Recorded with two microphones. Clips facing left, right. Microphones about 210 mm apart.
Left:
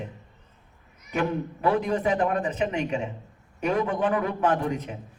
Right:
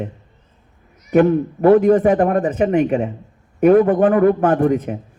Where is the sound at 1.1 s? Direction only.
50° right (ahead or behind).